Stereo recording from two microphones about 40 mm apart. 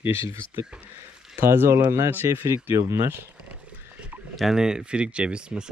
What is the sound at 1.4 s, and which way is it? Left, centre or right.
Speech, right.